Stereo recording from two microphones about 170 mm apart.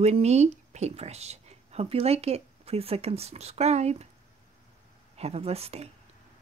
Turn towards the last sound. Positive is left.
turn(degrees=-35)  # may be behind; listen again after turning